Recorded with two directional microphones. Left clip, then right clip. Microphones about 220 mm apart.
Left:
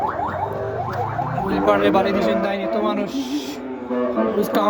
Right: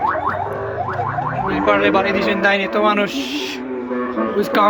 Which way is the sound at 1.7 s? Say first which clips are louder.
Right 2 dB; 20° left (ahead or behind).